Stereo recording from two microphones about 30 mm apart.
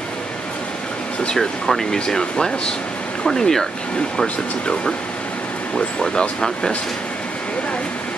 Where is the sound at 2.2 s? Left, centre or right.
Left.